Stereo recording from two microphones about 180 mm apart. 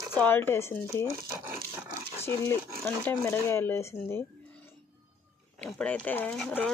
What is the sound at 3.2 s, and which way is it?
Speech, 15° left (ahead or behind).